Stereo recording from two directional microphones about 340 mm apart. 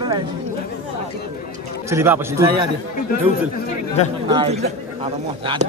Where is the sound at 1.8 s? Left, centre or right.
Centre.